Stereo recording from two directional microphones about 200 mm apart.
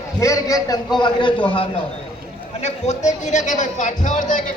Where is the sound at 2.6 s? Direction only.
35° left (ahead or behind).